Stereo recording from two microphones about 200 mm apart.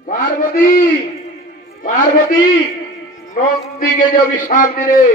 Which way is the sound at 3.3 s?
40° left (ahead or behind).